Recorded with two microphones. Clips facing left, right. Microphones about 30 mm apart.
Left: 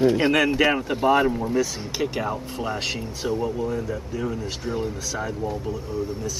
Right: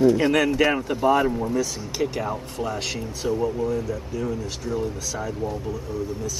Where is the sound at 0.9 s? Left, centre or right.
Left.